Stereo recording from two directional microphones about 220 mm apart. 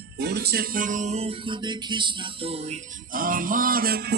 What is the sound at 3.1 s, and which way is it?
Music, 40° right (ahead or behind).